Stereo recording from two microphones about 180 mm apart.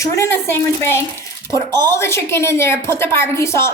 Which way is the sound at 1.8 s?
15° left (ahead or behind).